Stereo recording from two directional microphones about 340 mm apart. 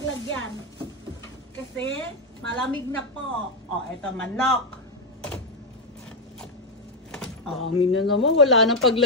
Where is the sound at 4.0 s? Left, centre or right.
Centre.